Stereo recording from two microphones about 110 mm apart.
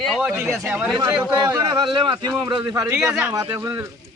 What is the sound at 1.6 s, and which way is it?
Speech, 50° right (ahead or behind).